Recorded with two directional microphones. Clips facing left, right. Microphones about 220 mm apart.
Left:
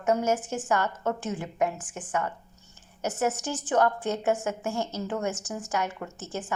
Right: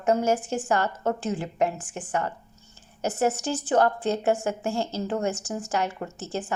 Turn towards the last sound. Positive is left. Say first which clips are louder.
# right 3 dB
turn(degrees=-30)  # may be behind; listen again after turning